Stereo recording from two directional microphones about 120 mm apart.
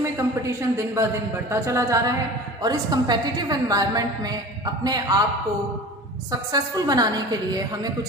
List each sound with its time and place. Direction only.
0.0 s a woman's voice: 25° right (ahead or behind)
6.5 s a woman's voice: 35° right (ahead or behind)